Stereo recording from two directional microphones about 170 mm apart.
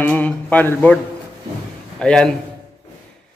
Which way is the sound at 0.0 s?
10° left (ahead or behind).